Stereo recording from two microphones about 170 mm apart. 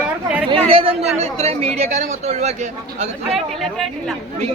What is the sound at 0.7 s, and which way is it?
Speech, 35° right (ahead or behind).